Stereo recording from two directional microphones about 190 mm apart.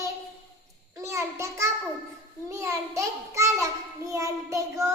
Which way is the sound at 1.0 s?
15° right (ahead or behind).